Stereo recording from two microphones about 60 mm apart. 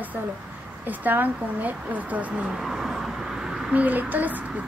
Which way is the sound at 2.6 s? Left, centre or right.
Centre.